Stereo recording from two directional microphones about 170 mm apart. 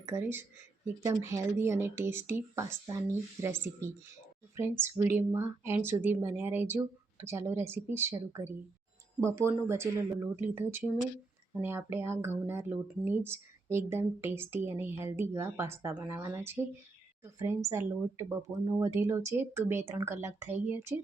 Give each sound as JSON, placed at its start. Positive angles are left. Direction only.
{"t": 0.0, "sound": "speech", "side_deg": -15}
{"t": 9.2, "sound": "speech", "side_deg": -15}